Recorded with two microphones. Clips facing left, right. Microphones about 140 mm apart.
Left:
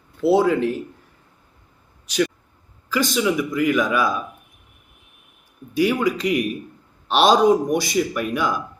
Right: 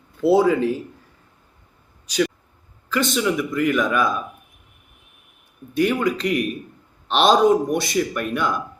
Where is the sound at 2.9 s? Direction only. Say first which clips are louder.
Left 1 dB; 5° left (ahead or behind).